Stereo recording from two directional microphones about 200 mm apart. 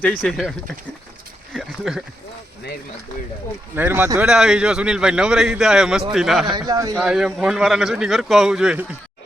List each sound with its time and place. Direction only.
0.0 s speech: 5° left (ahead or behind)
1.5 s speech: centre (ahead or behind)
3.8 s speech: 10° right (ahead or behind)
6.5 s speech: 20° right (ahead or behind)
6.9 s speech: 5° right (ahead or behind)